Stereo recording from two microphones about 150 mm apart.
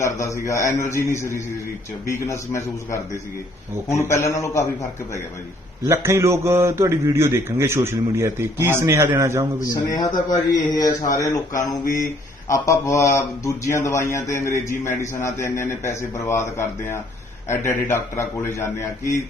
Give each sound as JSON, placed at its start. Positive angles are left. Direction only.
{"t": 0.0, "sound": "speech", "side_deg": 20}
{"t": 5.8, "sound": "a man's voice", "side_deg": -20}
{"t": 9.6, "sound": "a man's voice", "side_deg": 25}